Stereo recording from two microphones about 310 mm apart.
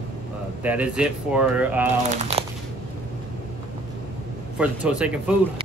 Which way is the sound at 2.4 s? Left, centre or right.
Centre.